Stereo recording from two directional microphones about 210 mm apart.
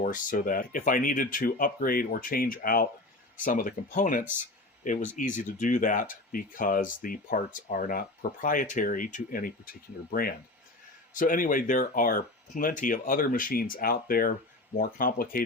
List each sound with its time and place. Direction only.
0.0 s speech: 40° left (ahead or behind)